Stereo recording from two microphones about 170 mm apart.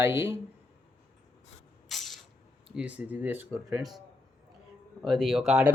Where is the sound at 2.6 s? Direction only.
5° right (ahead or behind).